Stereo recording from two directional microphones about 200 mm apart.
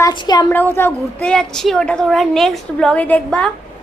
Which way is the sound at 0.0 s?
20° left (ahead or behind).